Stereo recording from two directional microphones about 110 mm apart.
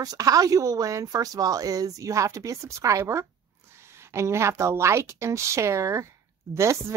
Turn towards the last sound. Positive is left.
turn(degrees=-25)  # may be behind; listen again after turning